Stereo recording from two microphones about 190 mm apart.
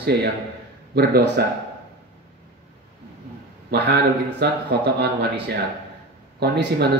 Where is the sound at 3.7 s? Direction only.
60° right (ahead or behind).